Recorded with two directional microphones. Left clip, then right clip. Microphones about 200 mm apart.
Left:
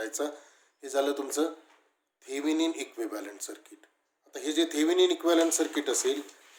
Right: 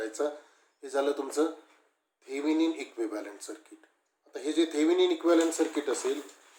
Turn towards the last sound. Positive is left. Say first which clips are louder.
# even
turn(degrees=35)  # may be behind; listen again after turning